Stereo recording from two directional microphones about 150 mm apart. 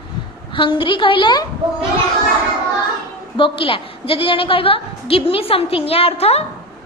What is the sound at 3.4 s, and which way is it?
A woman's voice, 35° left (ahead or behind).